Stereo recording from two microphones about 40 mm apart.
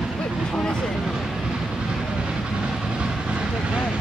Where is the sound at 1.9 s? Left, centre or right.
Centre.